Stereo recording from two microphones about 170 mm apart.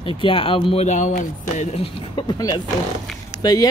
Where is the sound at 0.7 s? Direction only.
45° left (ahead or behind).